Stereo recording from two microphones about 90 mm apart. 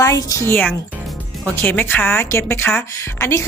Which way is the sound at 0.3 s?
35° left (ahead or behind).